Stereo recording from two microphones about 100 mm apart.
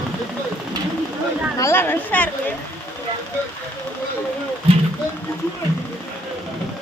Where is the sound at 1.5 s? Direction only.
25° left (ahead or behind).